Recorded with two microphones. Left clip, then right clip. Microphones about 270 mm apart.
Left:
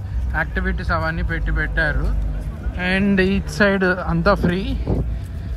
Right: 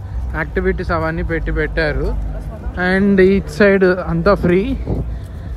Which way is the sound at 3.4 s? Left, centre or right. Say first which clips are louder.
Right 5 dB; left.